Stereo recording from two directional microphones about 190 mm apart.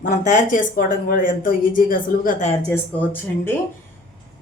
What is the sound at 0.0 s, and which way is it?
Speech, 45° left (ahead or behind).